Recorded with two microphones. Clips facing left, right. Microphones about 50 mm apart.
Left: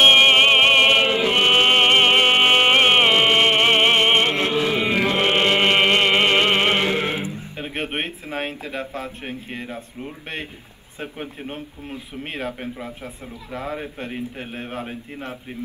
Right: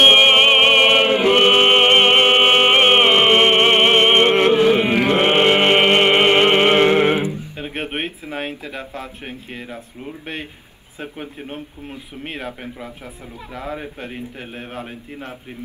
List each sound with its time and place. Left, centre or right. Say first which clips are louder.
0.1 s music: right 2 dB; right
1.0 s chant: right 4 dB; right
1.5 s music: right 3 dB; right
2.9 s music: right 3 dB; right
4.1 s music: right 5 dB; right
6.7 s music: right 7 dB; right
7.5 s a man's voice: right 1 dB; centre